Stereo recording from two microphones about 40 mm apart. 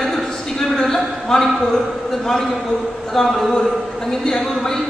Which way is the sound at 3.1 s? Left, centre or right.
Centre.